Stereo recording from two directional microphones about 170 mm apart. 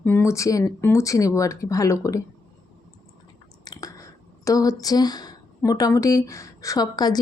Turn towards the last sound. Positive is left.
turn(degrees=25)  # may be behind; listen again after turning